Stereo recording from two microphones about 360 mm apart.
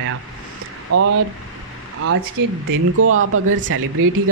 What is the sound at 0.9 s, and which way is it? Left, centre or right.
Speech, right.